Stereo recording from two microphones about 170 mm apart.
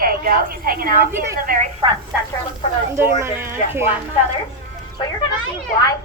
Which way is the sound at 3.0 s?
15° right (ahead or behind).